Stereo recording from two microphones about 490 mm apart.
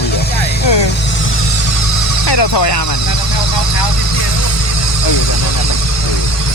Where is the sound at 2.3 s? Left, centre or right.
Left.